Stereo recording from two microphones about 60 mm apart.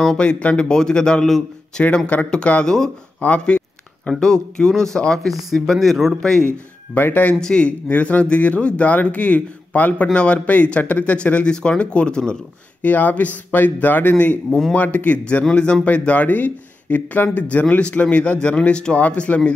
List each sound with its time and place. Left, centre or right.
0.2 s a man's voice: left
3.2 s a sound: left
4.2 s a man's voice: centre
5.5 s speech: centre
6.9 s speech: left
7.3 s speech: centre
12.8 s speech: left